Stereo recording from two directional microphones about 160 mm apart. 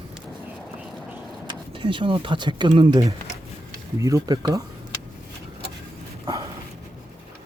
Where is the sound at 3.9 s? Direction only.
20° right (ahead or behind).